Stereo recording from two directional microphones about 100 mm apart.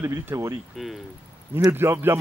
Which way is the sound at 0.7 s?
Centre (ahead or behind).